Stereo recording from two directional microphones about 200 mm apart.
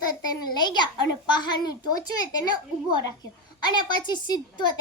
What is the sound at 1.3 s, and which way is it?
A woman's voice, 20° left (ahead or behind).